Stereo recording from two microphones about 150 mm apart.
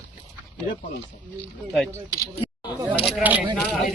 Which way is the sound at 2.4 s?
35° left (ahead or behind).